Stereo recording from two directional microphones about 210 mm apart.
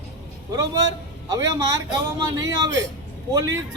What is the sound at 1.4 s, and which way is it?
Speech, 15° right (ahead or behind).